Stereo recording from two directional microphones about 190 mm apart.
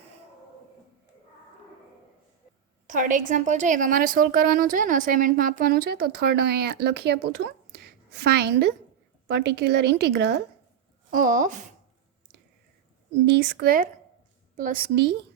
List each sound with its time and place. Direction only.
2.8 s a woman's voice: 45° right (ahead or behind); by 10.3 s 60° right (ahead or behind)
11.1 s a woman's voice: 45° right (ahead or behind)
13.2 s a woman's voice: 60° right (ahead or behind)